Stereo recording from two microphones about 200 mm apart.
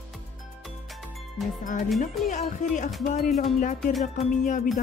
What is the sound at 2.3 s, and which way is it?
Music, 40° left (ahead or behind).